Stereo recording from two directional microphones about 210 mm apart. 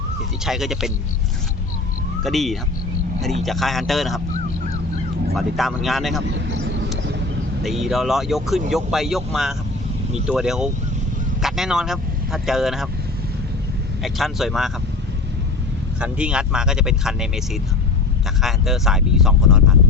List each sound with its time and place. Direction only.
0.4 s speech: centre (ahead or behind)
2.2 s speech: centre (ahead or behind)
5.3 s speech: centre (ahead or behind)
6.3 s vehicle: 60° right (ahead or behind)
7.6 s speech: centre (ahead or behind)
14.0 s speech: centre (ahead or behind)
16.0 s speech: 5° right (ahead or behind)